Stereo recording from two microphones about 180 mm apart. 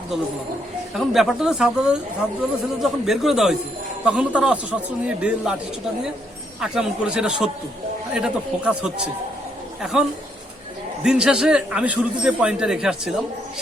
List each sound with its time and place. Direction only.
0.9 s a man's voice: centre (ahead or behind)
6.6 s speech: 5° right (ahead or behind)
11.0 s speech: 5° right (ahead or behind)